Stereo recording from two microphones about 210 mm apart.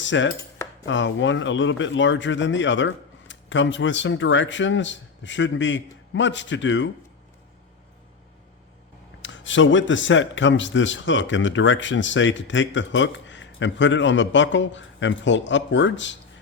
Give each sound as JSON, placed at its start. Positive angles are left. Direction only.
{"t": 0.0, "sound": "cutlery", "side_deg": 60}
{"t": 0.9, "sound": "speech", "side_deg": 60}
{"t": 9.2, "sound": "speech", "side_deg": 65}